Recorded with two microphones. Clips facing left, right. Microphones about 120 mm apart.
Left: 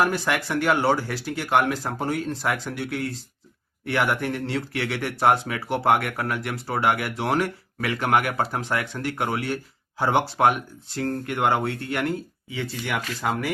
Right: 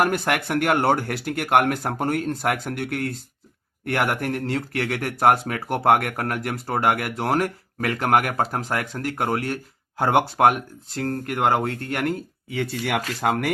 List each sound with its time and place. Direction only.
0.0 s speech: 55° right (ahead or behind); by 13.5 s 80° right